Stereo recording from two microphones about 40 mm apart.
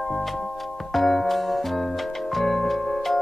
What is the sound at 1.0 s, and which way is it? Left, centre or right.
Music, centre.